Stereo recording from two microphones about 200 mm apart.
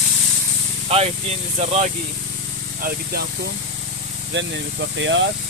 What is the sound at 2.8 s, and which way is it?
Speech, 50° right (ahead or behind).